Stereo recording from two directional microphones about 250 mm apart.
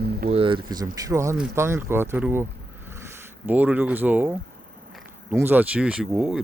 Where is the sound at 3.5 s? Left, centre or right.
Centre.